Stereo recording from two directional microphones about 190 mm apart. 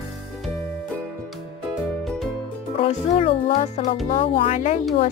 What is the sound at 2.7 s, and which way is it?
Speech, 30° left (ahead or behind).